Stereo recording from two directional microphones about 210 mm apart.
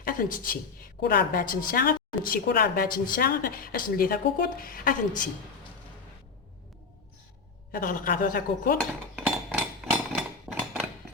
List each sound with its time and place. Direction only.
0.0 s a woman's voice: 40° left (ahead or behind)
7.7 s a woman's voice: 40° left (ahead or behind)
9.1 s hammer: 5° right (ahead or behind)
10.5 s a sound: centre (ahead or behind)